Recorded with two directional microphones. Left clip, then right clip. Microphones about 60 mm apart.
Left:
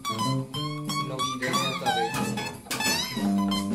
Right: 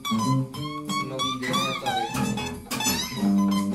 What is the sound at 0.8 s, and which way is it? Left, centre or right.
Music, centre.